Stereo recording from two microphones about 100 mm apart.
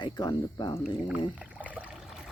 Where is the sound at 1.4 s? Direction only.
15° right (ahead or behind).